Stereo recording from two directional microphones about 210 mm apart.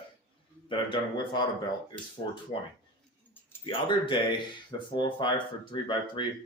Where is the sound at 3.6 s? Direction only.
25° left (ahead or behind).